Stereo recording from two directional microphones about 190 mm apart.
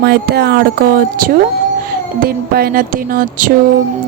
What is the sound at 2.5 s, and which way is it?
Speech, 50° right (ahead or behind).